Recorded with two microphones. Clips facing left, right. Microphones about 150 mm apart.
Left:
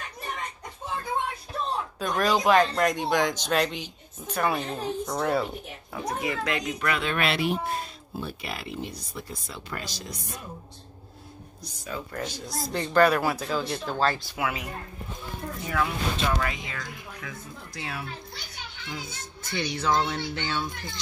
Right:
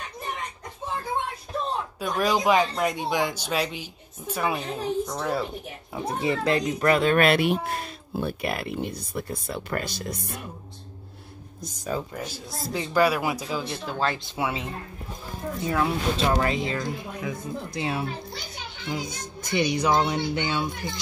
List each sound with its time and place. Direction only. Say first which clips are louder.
2.0 s speech: even; 10° right (ahead or behind)
5.9 s speech: right 3 dB; 30° right (ahead or behind); by 10.4 s 60° right (ahead or behind)
11.6 s speech: right 6 dB; 45° right (ahead or behind)
12.1 s speech: left 1 dB; 5° right (ahead or behind)
14.1 s speech: right 2 dB; 25° right (ahead or behind)